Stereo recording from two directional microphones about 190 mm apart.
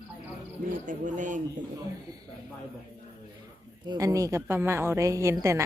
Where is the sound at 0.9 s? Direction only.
45° right (ahead or behind).